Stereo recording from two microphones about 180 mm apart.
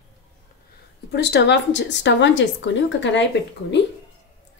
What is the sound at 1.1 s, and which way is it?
Speech, 70° left (ahead or behind).